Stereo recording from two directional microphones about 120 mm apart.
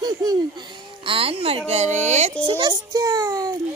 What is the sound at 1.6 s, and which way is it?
Speech, 70° right (ahead or behind).